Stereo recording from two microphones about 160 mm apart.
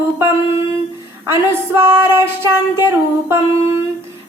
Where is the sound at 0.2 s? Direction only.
15° right (ahead or behind).